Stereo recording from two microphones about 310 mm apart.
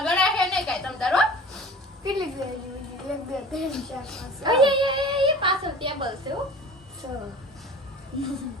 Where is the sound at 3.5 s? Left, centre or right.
Centre.